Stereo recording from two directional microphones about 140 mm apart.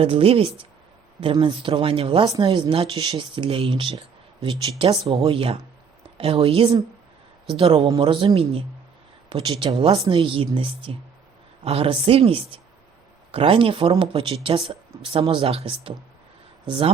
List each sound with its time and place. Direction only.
0.0 s speech: 40° right (ahead or behind)
2.2 s speech: 25° right (ahead or behind)
2.5 s speech: 35° right (ahead or behind)
5.0 s speech: 35° right (ahead or behind)